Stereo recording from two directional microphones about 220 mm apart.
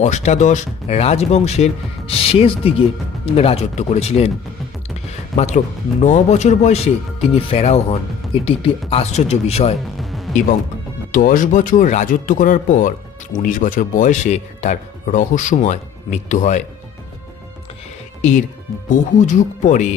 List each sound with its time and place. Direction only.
0.0 s speech: 30° left (ahead or behind)
5.4 s speech: 30° left (ahead or behind)
10.0 s music: centre (ahead or behind)
11.1 s speech: 40° left (ahead or behind)
18.2 s speech: 35° left (ahead or behind)